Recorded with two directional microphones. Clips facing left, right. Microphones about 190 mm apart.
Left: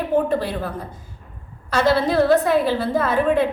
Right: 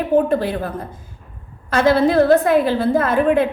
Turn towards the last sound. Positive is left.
turn(degrees=-50)  # may be behind; listen again after turning